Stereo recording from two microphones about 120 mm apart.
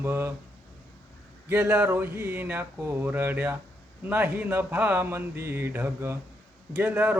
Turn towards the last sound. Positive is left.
turn(degrees=-15)  # may be behind; listen again after turning